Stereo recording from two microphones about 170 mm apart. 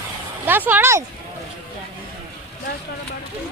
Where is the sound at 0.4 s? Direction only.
10° right (ahead or behind).